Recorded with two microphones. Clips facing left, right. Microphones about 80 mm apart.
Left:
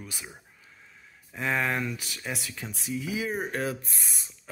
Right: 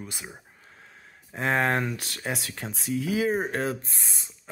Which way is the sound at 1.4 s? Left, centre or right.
Right.